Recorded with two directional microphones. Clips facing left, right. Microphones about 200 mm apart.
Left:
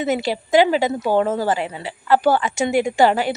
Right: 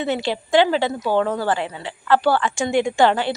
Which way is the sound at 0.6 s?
10° left (ahead or behind).